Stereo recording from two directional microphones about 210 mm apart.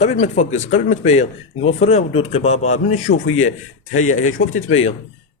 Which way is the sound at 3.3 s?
80° left.